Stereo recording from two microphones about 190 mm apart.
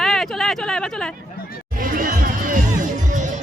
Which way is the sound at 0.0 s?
Centre (ahead or behind).